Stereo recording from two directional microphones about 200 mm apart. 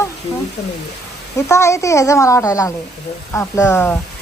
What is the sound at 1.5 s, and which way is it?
A child's voice, 15° left (ahead or behind).